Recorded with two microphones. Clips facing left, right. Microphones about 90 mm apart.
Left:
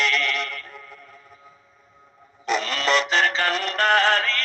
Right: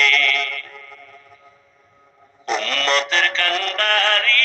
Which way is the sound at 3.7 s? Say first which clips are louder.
Left 3 dB; 20° left (ahead or behind).